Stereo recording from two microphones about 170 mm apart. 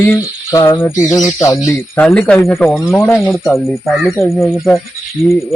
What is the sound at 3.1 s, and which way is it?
Speech, centre (ahead or behind).